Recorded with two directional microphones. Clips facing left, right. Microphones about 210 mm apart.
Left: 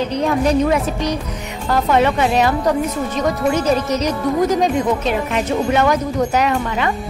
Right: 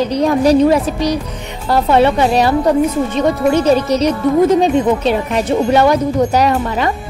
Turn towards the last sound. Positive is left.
turn(degrees=-35)  # may be behind; listen again after turning